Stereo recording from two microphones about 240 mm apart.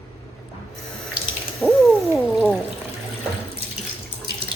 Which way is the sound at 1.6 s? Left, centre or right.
Centre.